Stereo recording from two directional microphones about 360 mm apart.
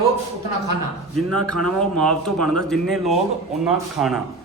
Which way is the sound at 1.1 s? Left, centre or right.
Right.